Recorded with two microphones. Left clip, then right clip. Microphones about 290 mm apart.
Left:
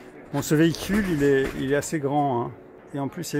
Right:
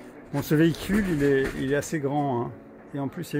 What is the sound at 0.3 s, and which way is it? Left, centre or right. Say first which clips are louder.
Speech: left 1 dB; centre.